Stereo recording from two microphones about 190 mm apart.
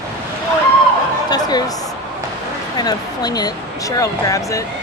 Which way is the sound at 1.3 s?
20° left (ahead or behind).